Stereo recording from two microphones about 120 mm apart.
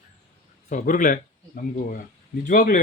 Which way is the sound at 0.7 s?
90° left.